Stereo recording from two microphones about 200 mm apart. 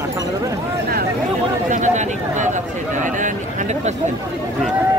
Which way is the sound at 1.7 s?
40° right (ahead or behind).